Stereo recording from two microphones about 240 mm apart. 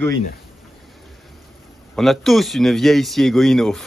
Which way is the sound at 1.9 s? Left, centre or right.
Centre.